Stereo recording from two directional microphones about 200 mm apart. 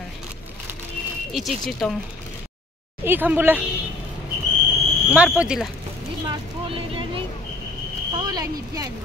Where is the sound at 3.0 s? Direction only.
10° right (ahead or behind).